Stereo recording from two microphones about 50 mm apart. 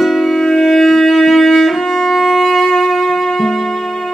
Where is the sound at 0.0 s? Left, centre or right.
Centre.